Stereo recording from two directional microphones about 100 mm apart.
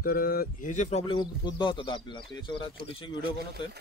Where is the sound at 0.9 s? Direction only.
90° left.